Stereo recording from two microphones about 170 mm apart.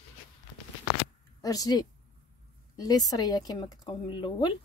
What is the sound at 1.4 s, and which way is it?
Speech, 20° left (ahead or behind).